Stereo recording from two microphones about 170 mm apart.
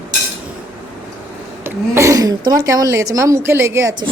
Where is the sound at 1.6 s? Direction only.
15° right (ahead or behind).